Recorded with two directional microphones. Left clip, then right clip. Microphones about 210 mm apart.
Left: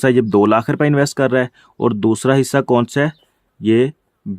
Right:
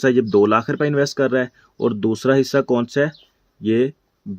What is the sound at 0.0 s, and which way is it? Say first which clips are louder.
Speech: left 2 dB; 45° left (ahead or behind).